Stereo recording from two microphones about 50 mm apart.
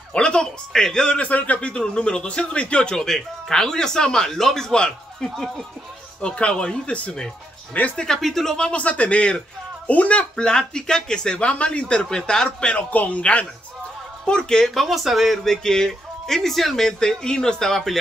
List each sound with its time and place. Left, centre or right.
0.1 s speech: centre
3.0 s speech: centre
5.3 s speech: centre
6.2 s speech: left; by 8.5 s centre
8.5 s speech: left
10.3 s speech: centre
14.7 s speech: centre